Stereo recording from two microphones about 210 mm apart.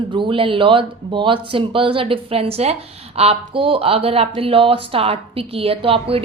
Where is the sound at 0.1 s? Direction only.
25° right (ahead or behind).